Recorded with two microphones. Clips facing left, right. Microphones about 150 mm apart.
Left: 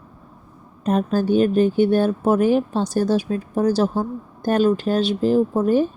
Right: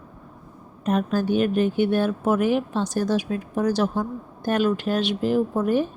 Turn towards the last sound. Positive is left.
turn(degrees=30)  # may be behind; listen again after turning